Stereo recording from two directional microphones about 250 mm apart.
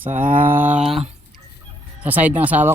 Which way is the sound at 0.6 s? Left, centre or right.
Centre.